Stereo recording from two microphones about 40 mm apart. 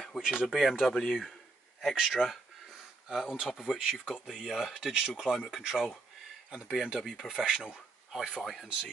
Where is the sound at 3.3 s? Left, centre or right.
Centre.